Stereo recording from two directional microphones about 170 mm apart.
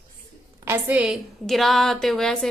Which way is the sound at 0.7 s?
10° right (ahead or behind).